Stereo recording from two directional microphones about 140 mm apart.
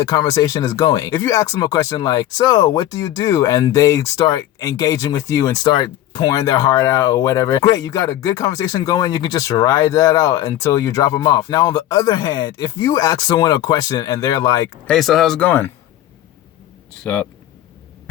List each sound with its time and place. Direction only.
0.0 s speech: 30° left (ahead or behind)
14.8 s speech: centre (ahead or behind)
17.0 s speech: 10° left (ahead or behind)